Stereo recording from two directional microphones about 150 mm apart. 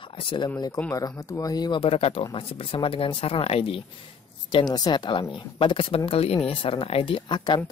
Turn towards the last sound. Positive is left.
turn(degrees=30)  # may be behind; listen again after turning